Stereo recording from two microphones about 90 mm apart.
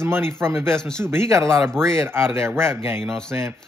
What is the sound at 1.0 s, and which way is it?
Speech, 30° right (ahead or behind).